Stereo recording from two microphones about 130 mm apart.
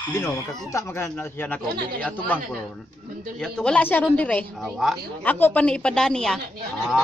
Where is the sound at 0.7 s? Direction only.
20° left (ahead or behind).